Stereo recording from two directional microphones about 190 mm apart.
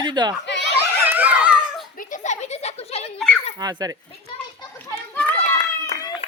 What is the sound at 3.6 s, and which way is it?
Speech, 20° right (ahead or behind).